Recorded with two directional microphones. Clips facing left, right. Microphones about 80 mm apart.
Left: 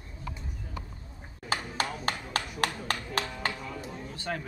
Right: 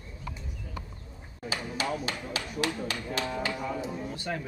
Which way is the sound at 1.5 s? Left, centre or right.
Left.